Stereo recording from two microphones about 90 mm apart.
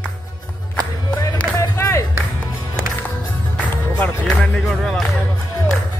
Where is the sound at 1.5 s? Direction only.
30° left (ahead or behind).